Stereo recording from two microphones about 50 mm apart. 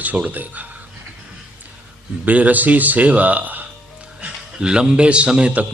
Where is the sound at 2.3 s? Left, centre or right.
Right.